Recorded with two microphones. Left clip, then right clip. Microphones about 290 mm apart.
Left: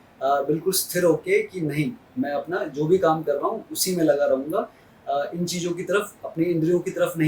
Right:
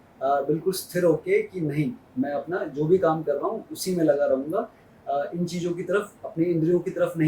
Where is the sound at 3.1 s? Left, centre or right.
Centre.